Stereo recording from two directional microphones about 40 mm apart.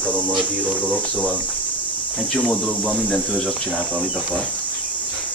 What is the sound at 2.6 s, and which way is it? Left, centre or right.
Speech, right.